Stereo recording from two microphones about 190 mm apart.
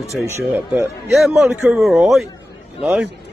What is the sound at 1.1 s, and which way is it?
Speech, centre (ahead or behind).